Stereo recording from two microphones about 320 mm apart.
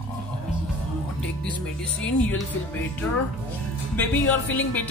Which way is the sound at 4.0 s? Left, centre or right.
Centre.